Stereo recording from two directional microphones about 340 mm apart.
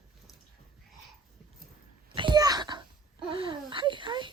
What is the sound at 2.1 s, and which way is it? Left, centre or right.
Wail, centre.